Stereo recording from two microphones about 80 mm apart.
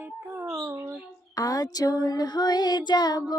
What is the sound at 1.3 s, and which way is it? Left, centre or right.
Child singing, left.